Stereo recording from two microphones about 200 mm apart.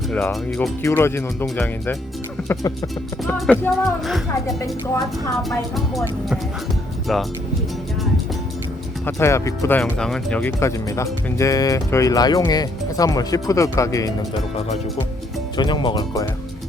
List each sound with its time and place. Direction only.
0.1 s music: 5° left (ahead or behind)
0.8 s speech: 15° left (ahead or behind)
3.2 s music: 5° left (ahead or behind)
5.4 s music: centre (ahead or behind)
9.0 s speech: 15° left (ahead or behind)
15.5 s speech: 25° left (ahead or behind)